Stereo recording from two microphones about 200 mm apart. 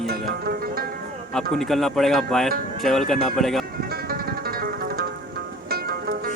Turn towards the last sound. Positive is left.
turn(degrees=-50)  # may be behind; listen again after turning